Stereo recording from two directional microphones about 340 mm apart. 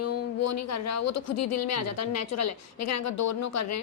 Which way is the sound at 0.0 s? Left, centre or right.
Left.